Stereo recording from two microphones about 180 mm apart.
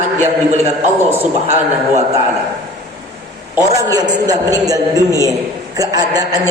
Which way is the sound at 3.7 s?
20° right (ahead or behind).